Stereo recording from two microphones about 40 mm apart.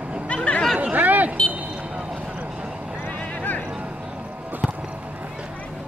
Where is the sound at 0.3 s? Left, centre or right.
Left.